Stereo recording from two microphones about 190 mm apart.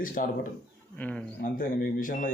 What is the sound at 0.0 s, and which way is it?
Speech, 45° left (ahead or behind).